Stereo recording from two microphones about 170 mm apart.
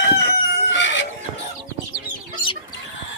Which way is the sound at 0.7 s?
90° left.